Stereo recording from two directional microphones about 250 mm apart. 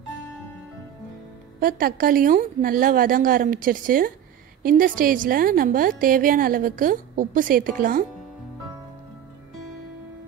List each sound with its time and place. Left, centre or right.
1.6 s a woman's voice: right